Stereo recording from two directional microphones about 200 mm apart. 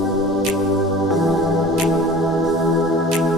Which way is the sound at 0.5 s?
Centre (ahead or behind).